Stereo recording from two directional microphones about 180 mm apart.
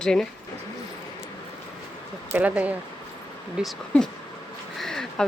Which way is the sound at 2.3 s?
10° right (ahead or behind).